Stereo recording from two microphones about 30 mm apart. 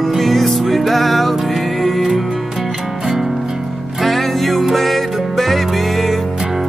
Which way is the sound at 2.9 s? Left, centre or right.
Right.